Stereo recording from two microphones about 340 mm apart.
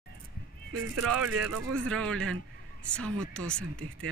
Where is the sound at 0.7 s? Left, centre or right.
Right.